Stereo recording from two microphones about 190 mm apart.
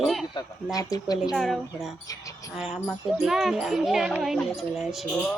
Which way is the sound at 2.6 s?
Centre (ahead or behind).